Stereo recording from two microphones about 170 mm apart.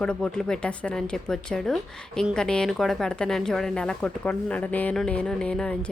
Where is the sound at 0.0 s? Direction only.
5° left (ahead or behind).